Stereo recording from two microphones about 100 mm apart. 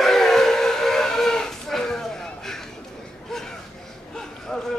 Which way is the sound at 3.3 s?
5° left (ahead or behind).